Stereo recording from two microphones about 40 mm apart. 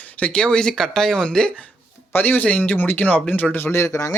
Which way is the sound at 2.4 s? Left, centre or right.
Left.